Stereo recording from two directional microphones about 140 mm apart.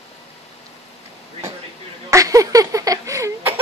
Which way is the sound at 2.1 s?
25° right (ahead or behind).